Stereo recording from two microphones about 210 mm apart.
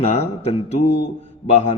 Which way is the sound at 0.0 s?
30° left (ahead or behind).